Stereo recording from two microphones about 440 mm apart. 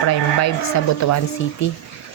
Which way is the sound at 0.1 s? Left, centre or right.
Left.